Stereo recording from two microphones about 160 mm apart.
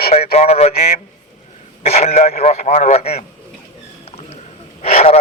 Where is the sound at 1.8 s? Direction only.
40° left (ahead or behind).